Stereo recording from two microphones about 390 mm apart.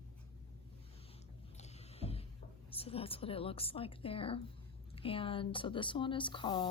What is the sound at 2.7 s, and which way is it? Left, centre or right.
A woman's voice, centre.